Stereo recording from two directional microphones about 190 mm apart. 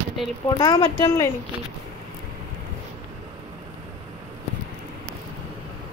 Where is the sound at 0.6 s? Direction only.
30° left (ahead or behind).